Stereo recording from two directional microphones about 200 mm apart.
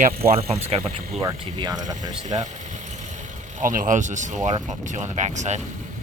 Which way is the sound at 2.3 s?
35° right (ahead or behind).